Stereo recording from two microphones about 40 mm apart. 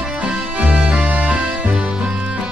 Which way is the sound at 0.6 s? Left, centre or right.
Right.